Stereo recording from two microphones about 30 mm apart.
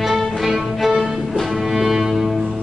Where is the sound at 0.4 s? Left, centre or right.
Centre.